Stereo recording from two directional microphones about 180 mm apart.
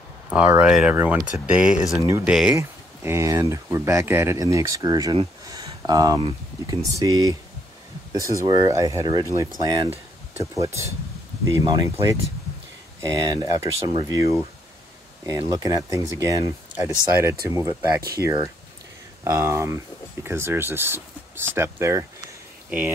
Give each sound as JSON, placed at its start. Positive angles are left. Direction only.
{"t": 0.3, "sound": "speech", "side_deg": -5}
{"t": 8.5, "sound": "speech", "side_deg": -20}